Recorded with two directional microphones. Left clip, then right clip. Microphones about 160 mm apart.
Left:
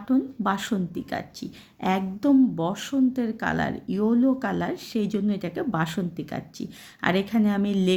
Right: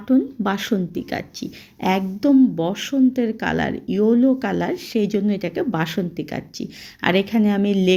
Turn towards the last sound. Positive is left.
turn(degrees=-10)  # may be behind; listen again after turning